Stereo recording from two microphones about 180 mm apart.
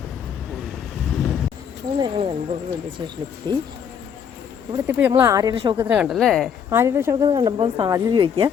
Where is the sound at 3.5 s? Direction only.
25° right (ahead or behind).